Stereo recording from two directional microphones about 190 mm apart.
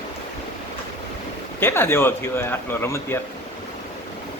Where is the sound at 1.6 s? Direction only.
10° left (ahead or behind).